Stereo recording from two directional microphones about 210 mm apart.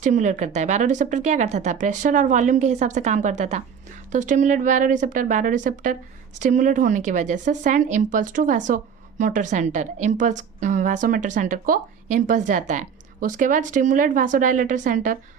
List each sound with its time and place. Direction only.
0.0 s a woman's voice: 35° right (ahead or behind)